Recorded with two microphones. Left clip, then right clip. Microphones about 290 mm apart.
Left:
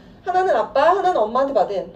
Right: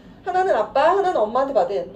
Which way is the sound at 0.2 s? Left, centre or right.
Centre.